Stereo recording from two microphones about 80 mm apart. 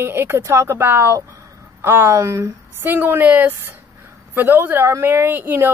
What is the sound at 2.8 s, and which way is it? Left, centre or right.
Speech, right.